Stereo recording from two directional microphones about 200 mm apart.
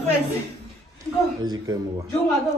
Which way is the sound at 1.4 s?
20° right (ahead or behind).